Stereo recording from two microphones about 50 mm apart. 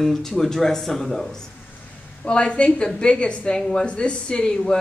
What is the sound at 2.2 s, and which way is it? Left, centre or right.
A woman's voice, left.